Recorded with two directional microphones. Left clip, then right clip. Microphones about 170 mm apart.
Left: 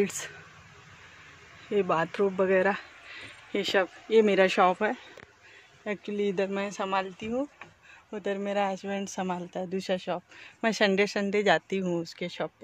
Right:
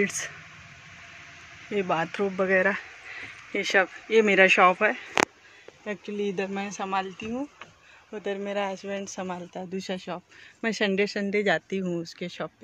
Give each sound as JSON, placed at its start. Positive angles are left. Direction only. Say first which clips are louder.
{"t": 1.7, "sound": "speech", "louder": "even", "side_deg": 25}
{"t": 10.6, "sound": "speech", "louder": "left 1 dB", "side_deg": 40}